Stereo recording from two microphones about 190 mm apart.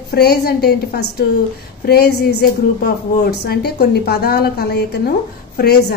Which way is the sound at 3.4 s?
55° left (ahead or behind).